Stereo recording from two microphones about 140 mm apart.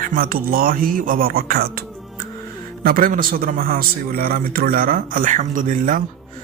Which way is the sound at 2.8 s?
85° right.